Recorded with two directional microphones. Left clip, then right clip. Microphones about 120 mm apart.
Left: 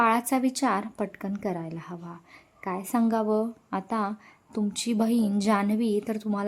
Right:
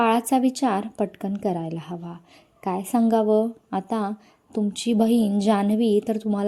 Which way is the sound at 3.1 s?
20° right (ahead or behind).